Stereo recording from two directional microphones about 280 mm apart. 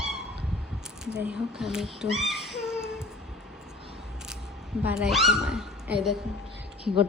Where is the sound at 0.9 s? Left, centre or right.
Centre.